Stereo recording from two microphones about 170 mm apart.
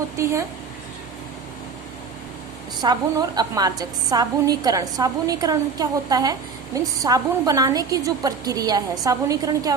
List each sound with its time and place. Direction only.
0.2 s speech: 15° right (ahead or behind)
2.8 s a woman's voice: 25° right (ahead or behind)